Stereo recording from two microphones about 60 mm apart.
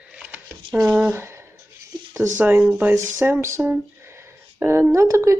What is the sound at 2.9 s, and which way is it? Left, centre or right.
Speech, right.